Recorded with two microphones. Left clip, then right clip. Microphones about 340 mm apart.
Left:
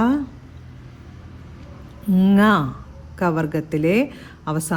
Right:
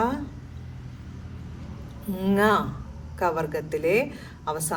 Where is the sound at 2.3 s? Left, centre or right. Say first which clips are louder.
Left 3 dB; left.